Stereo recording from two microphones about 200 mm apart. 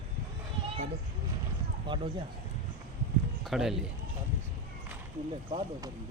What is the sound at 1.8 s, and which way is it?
Speech, 25° right (ahead or behind).